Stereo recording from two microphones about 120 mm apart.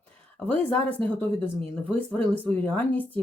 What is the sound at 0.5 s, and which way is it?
Speech, 15° left (ahead or behind).